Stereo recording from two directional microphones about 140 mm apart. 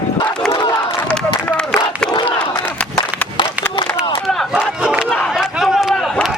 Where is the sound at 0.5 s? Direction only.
35° left (ahead or behind).